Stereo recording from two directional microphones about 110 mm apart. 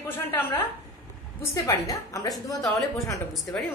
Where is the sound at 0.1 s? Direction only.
20° left (ahead or behind).